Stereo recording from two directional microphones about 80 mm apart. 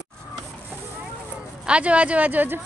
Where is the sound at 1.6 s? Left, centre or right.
Centre.